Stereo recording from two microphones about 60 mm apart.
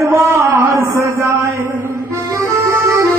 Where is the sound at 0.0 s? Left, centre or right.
Right.